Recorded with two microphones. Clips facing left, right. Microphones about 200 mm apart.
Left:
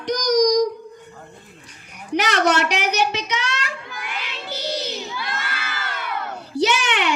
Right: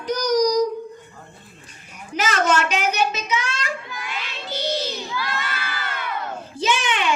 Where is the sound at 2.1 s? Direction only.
70° left (ahead or behind).